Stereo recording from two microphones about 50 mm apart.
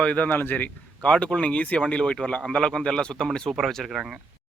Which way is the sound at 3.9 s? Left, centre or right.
Centre.